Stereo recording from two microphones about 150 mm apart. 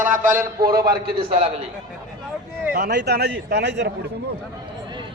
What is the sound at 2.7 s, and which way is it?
A man's voice, 90° right.